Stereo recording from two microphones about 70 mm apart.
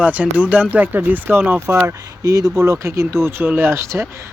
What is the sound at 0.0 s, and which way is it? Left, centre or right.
Speech, centre.